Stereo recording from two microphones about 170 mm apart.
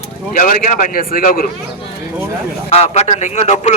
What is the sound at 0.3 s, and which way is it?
A man's voice, 55° left (ahead or behind).